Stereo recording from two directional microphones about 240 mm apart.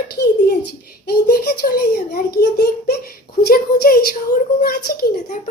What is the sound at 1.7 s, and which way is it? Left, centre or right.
A woman's voice, left.